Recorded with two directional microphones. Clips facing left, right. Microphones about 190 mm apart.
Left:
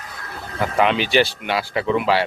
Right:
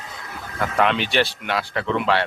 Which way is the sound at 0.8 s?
Centre (ahead or behind).